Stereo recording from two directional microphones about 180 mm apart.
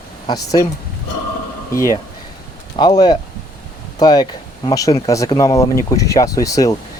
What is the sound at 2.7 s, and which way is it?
Speech, 20° left (ahead or behind).